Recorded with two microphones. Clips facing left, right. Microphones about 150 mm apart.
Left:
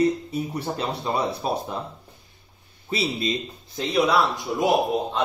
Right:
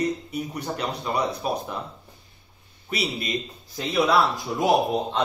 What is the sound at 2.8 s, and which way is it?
Speech, 30° left (ahead or behind).